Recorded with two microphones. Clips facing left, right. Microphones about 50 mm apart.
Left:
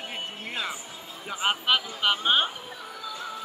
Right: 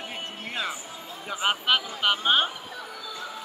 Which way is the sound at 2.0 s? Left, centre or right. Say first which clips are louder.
Right 1 dB; centre.